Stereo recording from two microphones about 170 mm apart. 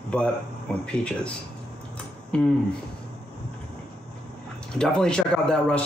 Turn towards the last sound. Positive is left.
turn(degrees=5)  # may be behind; listen again after turning